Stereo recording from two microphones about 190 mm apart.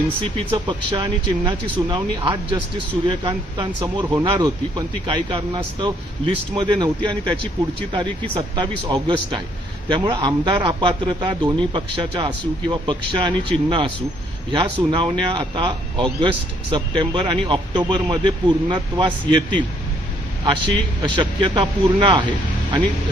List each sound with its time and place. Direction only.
0.3 s a man's voice: 25° right (ahead or behind)
8.4 s a man's voice: 25° right (ahead or behind)
21.0 s a man's voice: 25° right (ahead or behind)